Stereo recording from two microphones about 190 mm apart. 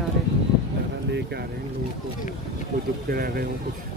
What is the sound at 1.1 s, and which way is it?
Speech, 60° right (ahead or behind).